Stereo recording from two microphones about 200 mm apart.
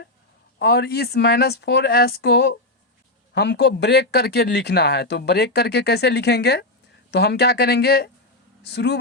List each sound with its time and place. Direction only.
0.6 s speech: 55° left (ahead or behind)